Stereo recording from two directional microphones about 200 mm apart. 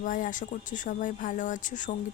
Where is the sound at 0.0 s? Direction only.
40° left (ahead or behind).